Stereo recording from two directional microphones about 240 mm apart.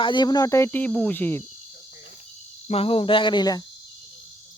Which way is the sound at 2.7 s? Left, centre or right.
Left.